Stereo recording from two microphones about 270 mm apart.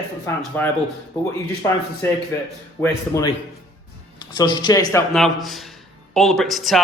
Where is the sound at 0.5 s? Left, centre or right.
Centre.